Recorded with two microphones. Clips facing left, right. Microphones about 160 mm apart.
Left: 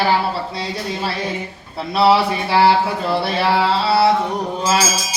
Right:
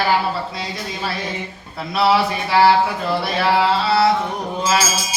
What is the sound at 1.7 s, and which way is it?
Speech, 30° left (ahead or behind).